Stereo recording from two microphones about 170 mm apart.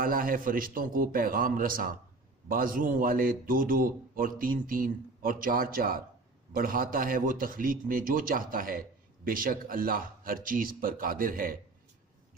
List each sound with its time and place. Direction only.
0.0 s a man's voice: 55° right (ahead or behind)